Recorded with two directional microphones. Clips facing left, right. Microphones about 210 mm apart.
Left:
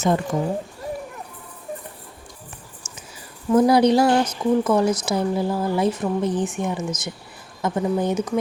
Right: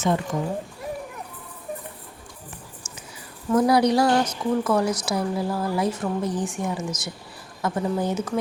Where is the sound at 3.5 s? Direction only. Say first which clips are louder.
Left 3 dB; 20° left (ahead or behind).